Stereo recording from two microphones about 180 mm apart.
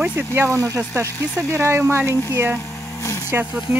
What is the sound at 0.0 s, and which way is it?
Speech, 10° right (ahead or behind).